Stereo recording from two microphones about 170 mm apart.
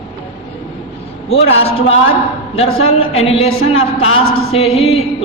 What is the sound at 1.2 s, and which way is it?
A man's voice, 35° left (ahead or behind).